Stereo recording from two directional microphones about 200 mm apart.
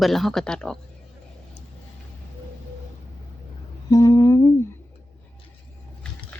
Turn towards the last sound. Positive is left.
turn(degrees=15)  # may be behind; listen again after turning